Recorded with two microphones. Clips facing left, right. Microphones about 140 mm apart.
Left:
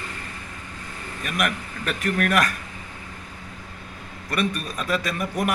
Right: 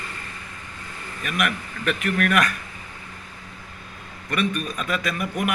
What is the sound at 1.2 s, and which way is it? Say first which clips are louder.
A man's voice: even; 40° left (ahead or behind).